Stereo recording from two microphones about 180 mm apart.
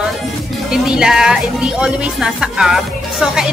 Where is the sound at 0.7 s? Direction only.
5° right (ahead or behind).